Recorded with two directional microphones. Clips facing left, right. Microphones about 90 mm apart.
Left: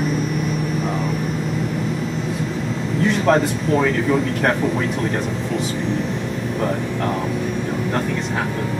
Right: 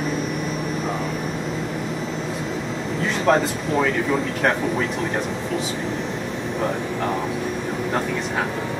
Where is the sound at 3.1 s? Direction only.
Centre (ahead or behind).